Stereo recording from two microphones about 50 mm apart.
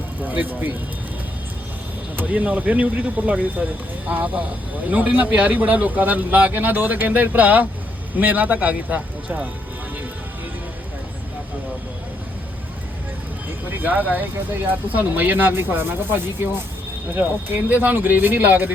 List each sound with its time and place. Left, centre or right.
0.2 s speech: right
2.1 s a man's voice: right
13.7 s a man's voice: right